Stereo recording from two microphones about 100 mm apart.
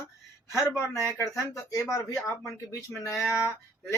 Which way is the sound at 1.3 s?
30° left (ahead or behind).